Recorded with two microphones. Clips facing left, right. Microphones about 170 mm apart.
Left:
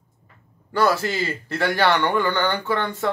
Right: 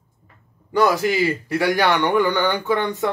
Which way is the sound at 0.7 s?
15° right (ahead or behind).